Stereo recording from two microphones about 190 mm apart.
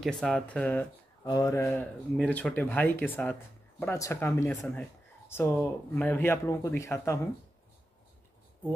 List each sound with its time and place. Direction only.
0.0 s speech: 5° left (ahead or behind)
1.2 s speech: 20° left (ahead or behind)